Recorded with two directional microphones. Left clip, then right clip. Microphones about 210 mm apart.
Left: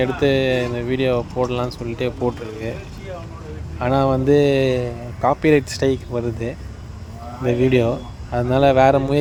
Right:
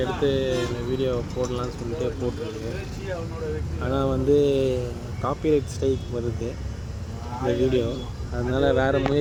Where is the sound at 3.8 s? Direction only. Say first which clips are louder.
Left 8 dB; 40° left (ahead or behind).